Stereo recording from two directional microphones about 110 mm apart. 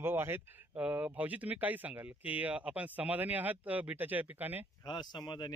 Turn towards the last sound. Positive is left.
turn(degrees=40)  # may be behind; listen again after turning